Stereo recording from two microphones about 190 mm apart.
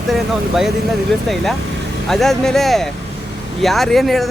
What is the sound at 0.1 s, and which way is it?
Speech, centre (ahead or behind).